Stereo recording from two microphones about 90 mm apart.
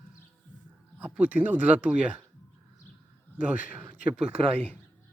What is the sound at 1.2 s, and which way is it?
Speech, 15° right (ahead or behind).